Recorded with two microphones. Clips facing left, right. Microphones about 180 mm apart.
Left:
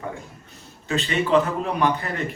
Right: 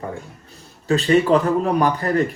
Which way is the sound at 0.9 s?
35° right (ahead or behind).